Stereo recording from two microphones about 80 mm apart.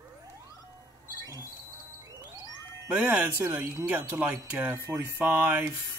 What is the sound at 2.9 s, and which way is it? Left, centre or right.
Speech, centre.